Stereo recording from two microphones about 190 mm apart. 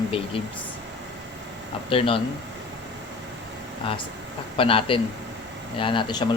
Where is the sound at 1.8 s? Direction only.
30° left (ahead or behind).